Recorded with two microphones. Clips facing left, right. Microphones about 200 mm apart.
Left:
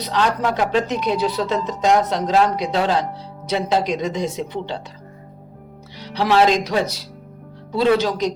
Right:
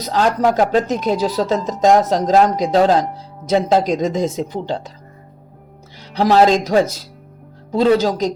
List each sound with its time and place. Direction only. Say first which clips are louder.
0.0 s speech: right 4 dB; 45° right (ahead or behind)
6.1 s speech: right 3 dB; 40° right (ahead or behind)